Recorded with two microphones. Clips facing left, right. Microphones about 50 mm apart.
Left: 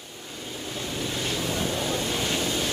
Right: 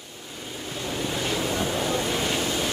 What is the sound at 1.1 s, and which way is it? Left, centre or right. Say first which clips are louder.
Boat: right 3 dB; right.